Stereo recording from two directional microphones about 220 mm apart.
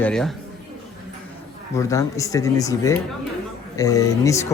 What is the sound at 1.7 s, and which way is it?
Speech, 15° left (ahead or behind).